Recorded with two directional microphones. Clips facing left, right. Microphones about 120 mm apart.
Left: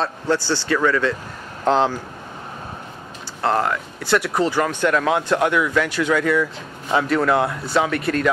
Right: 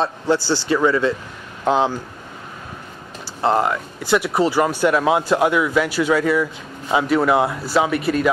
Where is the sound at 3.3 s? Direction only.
15° right (ahead or behind).